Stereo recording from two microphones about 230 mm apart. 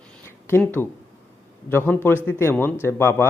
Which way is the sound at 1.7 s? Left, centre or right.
Centre.